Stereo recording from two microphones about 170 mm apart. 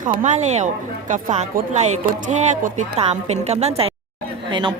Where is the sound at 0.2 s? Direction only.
45° right (ahead or behind).